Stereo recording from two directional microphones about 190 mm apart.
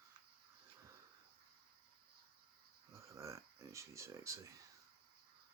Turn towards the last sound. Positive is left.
turn(degrees=-15)  # may be behind; listen again after turning